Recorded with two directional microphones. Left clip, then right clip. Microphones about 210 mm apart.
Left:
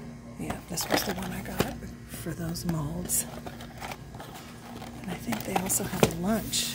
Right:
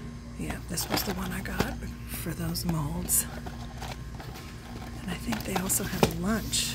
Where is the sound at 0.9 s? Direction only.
15° left (ahead or behind).